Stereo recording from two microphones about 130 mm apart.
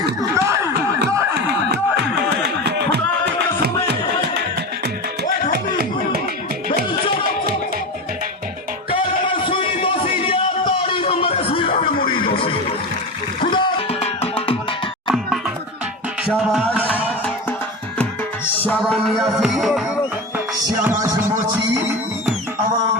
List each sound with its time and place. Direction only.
0.3 s snicker: 20° right (ahead or behind)
8.9 s music: 40° left (ahead or behind)
15.1 s music: 5° right (ahead or behind)
18.4 s music: 15° left (ahead or behind)
20.8 s music: 20° right (ahead or behind)